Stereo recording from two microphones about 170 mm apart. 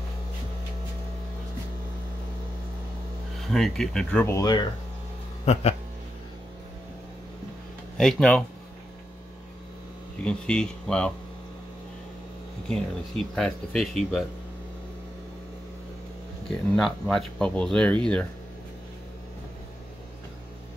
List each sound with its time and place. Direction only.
3.3 s speech: centre (ahead or behind)
4.4 s speech: 25° left (ahead or behind)
5.4 s speech: 40° left (ahead or behind)
8.0 s speech: centre (ahead or behind)
10.2 s speech: 5° left (ahead or behind)
12.6 s speech: 5° left (ahead or behind)
16.7 s speech: centre (ahead or behind)